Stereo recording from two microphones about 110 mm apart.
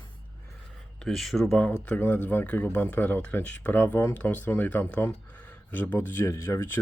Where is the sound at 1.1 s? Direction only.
Centre (ahead or behind).